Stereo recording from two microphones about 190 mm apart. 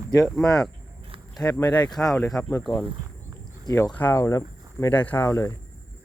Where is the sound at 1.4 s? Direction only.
15° left (ahead or behind).